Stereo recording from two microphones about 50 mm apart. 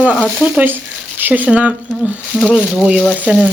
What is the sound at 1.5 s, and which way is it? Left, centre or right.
Speech, right.